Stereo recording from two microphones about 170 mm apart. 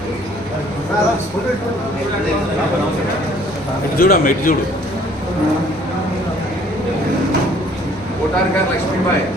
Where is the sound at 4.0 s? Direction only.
55° left (ahead or behind).